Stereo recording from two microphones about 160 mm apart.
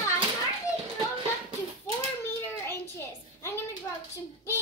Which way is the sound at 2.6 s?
15° left (ahead or behind).